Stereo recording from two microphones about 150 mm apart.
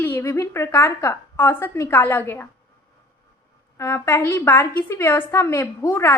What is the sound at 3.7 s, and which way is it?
A woman's voice, 20° left (ahead or behind).